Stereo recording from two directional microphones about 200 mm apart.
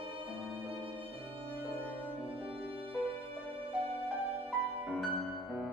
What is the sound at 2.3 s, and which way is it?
Music, 30° right (ahead or behind).